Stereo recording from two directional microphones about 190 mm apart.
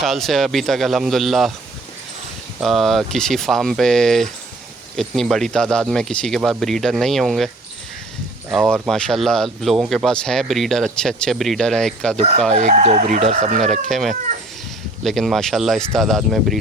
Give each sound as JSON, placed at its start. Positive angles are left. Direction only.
{"t": 0.0, "sound": "speech", "side_deg": 0}
{"t": 2.6, "sound": "speech", "side_deg": 0}
{"t": 12.5, "sound": "speech", "side_deg": -35}
{"t": 13.6, "sound": "speech", "side_deg": 0}